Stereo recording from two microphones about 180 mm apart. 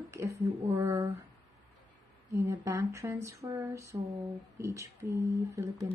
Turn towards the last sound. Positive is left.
turn(degrees=-15)  # may be behind; listen again after turning